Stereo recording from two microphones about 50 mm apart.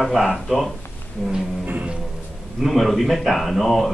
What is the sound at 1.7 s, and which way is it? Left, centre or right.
Music, right.